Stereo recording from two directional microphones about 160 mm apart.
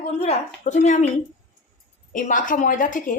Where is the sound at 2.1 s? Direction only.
55° left (ahead or behind).